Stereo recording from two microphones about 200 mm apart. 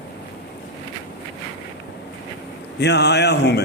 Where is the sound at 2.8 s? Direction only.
60° left (ahead or behind).